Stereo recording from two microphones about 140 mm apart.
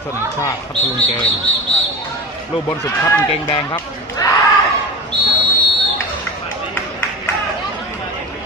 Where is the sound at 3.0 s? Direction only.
25° left (ahead or behind).